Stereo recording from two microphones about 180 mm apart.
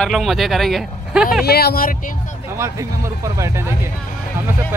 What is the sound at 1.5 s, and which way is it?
Speech, 60° left (ahead or behind).